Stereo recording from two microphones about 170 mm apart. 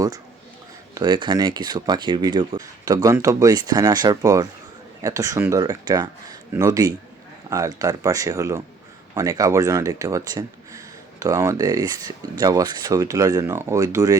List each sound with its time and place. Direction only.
0.9 s speech: 25° right (ahead or behind)